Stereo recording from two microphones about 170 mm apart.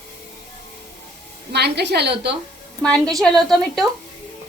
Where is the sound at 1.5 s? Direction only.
75° right (ahead or behind).